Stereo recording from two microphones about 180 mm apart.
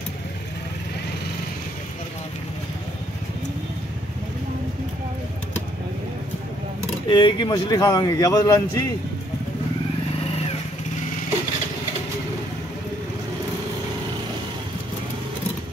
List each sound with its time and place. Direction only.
7.1 s speech: 25° left (ahead or behind)